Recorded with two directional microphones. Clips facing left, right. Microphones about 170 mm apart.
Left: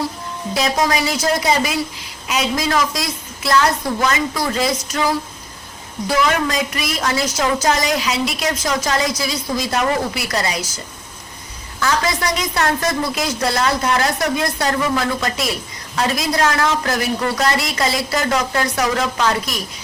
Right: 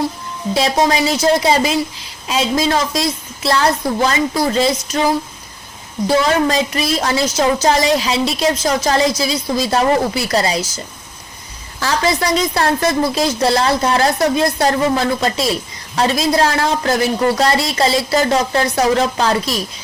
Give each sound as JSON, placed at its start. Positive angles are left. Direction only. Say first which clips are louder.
{"t": 0.5, "sound": "a woman's voice", "louder": "right 3 dB", "side_deg": -25}
{"t": 11.8, "sound": "a woman's voice", "louder": "right 2 dB", "side_deg": -30}